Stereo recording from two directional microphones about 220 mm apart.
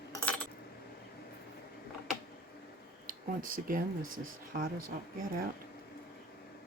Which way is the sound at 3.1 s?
40° right (ahead or behind).